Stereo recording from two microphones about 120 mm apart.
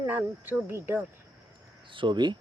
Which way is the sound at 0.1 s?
15° right (ahead or behind).